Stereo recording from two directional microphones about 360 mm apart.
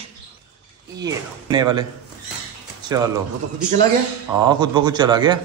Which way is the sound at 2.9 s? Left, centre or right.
Centre.